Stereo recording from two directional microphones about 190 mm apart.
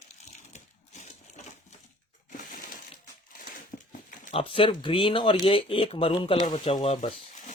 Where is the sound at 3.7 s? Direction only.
30° left (ahead or behind).